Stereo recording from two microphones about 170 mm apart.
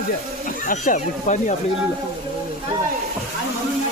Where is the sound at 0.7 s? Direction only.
50° left (ahead or behind).